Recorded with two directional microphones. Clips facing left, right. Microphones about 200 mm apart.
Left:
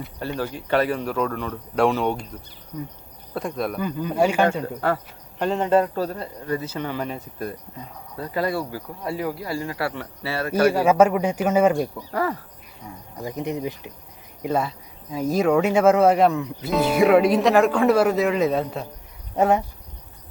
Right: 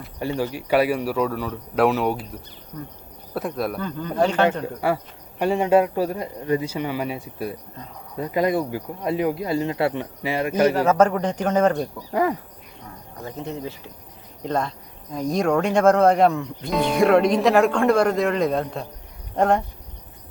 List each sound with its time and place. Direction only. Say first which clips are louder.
0.2 s a man's voice: right 3 dB; 15° right (ahead or behind)
3.3 s speech: right 1 dB; centre (ahead or behind)
3.8 s speech: left 2 dB; 10° left (ahead or behind)
4.8 s a man's voice: right 2 dB; 10° right (ahead or behind)
10.7 s speech: left 3 dB; 10° left (ahead or behind)
12.1 s a man's voice: right 4 dB; 15° right (ahead or behind)
13.2 s speech: left 4 dB; 15° left (ahead or behind)